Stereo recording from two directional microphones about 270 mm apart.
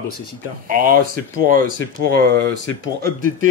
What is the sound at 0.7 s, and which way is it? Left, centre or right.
A man's voice, right.